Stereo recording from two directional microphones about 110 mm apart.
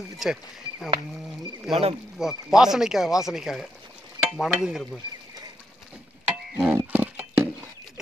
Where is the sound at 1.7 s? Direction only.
5° right (ahead or behind).